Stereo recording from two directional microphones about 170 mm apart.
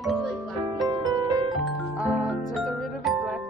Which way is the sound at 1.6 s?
Centre (ahead or behind).